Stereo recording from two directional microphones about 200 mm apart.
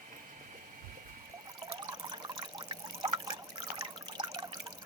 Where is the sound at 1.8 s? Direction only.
20° right (ahead or behind).